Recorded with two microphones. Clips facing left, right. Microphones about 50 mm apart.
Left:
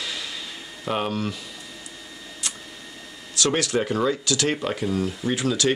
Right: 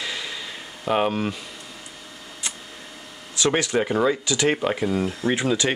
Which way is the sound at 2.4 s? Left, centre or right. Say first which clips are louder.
Right 1 dB; right.